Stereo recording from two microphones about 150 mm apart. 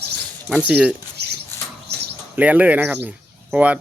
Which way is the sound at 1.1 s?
90° right.